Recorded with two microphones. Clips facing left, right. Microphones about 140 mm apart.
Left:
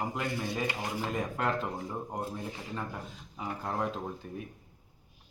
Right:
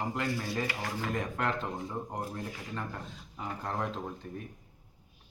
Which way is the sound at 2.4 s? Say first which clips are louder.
Even; 20° left (ahead or behind).